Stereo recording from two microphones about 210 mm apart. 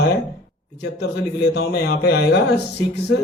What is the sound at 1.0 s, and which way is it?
Speech, 50° left (ahead or behind).